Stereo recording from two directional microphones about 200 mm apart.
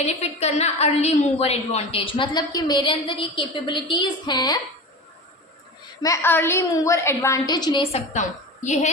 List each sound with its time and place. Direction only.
0.0 s a woman's voice: 30° left (ahead or behind)
6.0 s a woman's voice: 15° left (ahead or behind); by 8.9 s 35° left (ahead or behind)